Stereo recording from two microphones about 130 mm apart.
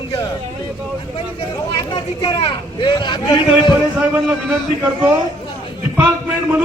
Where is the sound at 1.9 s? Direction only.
40° left (ahead or behind).